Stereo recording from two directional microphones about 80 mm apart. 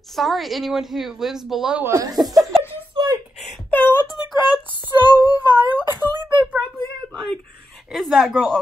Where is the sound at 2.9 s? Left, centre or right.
Right.